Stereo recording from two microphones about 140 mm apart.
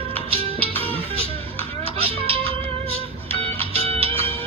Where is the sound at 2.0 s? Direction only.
45° right (ahead or behind).